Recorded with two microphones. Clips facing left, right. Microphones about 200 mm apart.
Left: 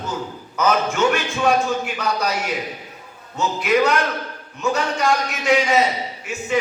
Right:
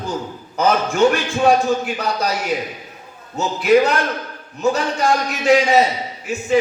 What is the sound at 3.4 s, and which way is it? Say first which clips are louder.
A man's voice: right 4 dB; 35° right (ahead or behind).